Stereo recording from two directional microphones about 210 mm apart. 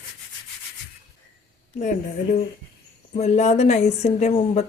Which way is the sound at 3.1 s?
35° left (ahead or behind).